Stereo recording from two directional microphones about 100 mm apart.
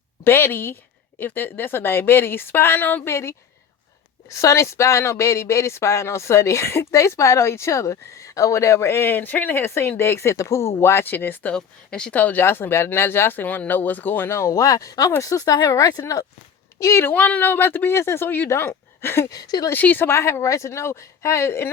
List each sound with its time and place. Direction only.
0.3 s speech: 25° left (ahead or behind)
11.5 s speech: 10° left (ahead or behind); by 16.2 s 40° left (ahead or behind)
16.8 s speech: 25° left (ahead or behind)
19.3 s speech: 40° left (ahead or behind)
19.7 s speech: 20° left (ahead or behind)